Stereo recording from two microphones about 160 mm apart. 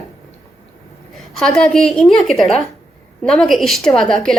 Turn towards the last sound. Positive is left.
turn(degrees=5)  # may be behind; listen again after turning